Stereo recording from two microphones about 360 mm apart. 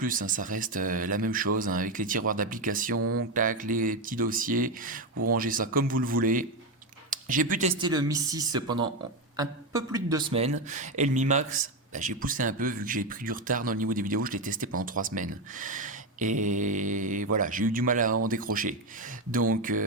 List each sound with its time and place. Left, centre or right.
0.0 s speech: right
3.0 s a sound: right
3.3 s speech: right